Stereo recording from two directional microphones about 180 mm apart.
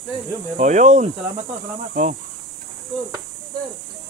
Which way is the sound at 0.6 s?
40° right (ahead or behind).